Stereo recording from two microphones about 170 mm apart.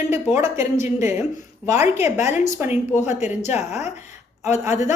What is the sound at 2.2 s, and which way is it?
Speech, 45° left (ahead or behind).